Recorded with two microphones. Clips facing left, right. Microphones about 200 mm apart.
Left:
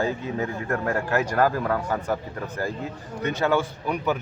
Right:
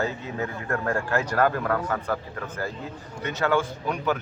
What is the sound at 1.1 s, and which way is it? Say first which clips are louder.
Speech: left 1 dB; 10° left (ahead or behind).